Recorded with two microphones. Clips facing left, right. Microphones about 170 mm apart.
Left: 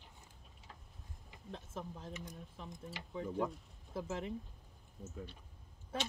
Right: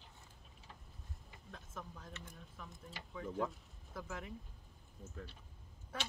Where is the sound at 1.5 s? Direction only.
30° left (ahead or behind).